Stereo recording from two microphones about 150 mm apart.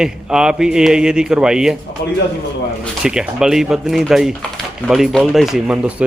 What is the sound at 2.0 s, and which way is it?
Speech, 90° left.